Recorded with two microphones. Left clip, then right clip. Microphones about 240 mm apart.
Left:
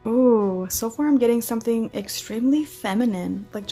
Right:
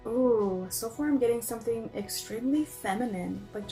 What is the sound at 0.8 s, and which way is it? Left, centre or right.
A woman's voice, left.